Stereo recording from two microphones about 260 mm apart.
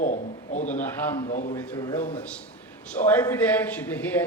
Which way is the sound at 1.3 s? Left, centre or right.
Left.